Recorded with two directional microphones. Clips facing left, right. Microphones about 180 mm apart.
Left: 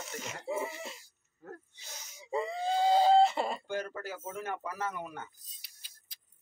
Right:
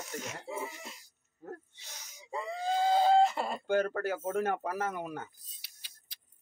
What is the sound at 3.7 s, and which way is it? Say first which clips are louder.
Speech: right 7 dB; 55° right (ahead or behind).